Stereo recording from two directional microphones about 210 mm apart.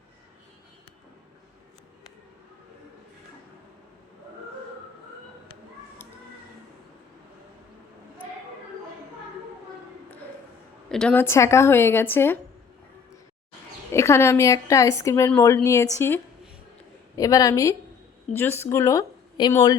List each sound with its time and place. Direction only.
10.8 s a woman's voice: 5° left (ahead or behind)
13.9 s a woman's voice: 15° left (ahead or behind)